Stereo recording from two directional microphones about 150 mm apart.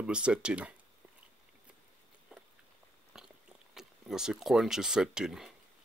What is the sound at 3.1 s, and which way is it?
Chewing, 5° right (ahead or behind).